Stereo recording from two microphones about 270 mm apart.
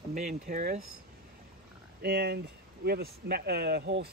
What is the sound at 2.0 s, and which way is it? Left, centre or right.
Speech, right.